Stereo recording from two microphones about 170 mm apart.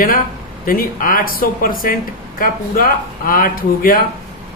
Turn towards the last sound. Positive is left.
turn(degrees=55)  # may be behind; listen again after turning